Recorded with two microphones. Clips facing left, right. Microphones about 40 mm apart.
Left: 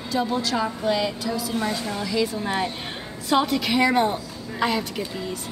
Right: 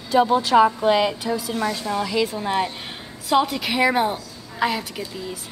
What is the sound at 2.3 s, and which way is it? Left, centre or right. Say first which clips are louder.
A woman's voice: right 2 dB; centre.